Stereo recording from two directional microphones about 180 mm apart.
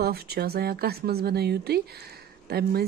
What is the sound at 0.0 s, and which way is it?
Speech, 60° right (ahead or behind).